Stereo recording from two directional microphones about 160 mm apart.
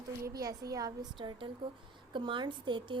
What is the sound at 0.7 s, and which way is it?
A woman's voice, 20° right (ahead or behind).